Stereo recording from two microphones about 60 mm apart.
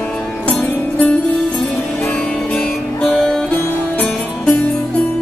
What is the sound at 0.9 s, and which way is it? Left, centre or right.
Music, left.